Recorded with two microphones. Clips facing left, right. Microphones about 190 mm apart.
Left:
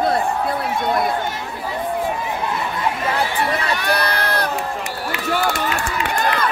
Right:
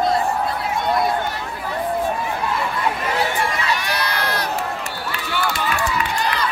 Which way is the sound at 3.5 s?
55° left (ahead or behind).